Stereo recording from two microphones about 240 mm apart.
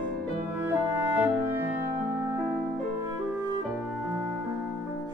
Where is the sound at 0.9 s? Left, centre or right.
Centre.